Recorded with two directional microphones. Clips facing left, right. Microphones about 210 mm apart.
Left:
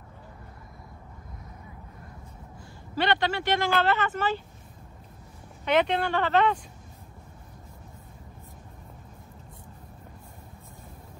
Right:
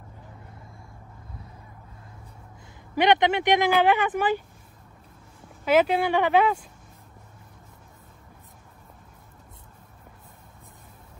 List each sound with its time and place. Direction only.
3.0 s speech: 20° right (ahead or behind)
5.7 s speech: 5° right (ahead or behind)